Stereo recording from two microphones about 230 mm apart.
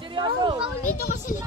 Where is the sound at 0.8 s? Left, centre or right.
Left.